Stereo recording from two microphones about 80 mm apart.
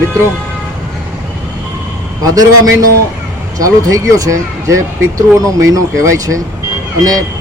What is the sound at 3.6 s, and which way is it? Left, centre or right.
Speech, right.